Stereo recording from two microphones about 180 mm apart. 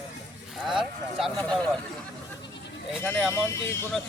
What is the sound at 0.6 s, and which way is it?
Speech, centre (ahead or behind).